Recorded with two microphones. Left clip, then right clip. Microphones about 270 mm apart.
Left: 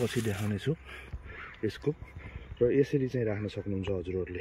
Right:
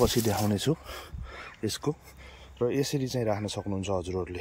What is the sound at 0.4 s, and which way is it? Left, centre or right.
Speech, centre.